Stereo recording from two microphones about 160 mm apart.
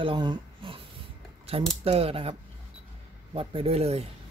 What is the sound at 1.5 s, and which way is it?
Speech, 40° right (ahead or behind).